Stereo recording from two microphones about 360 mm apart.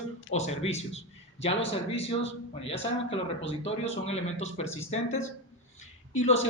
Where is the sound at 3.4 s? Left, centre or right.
Centre.